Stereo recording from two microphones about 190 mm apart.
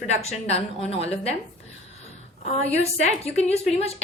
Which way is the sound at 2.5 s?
35° left (ahead or behind).